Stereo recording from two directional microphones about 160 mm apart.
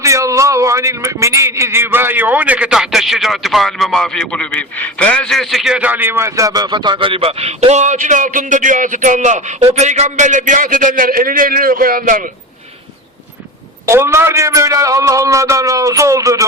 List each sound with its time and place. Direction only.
0.0 s a man's voice: 20° right (ahead or behind); by 12.3 s 60° right (ahead or behind)
13.8 s a man's voice: 15° right (ahead or behind)